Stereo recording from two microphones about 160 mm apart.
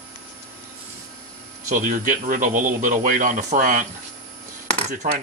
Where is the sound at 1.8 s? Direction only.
55° right (ahead or behind).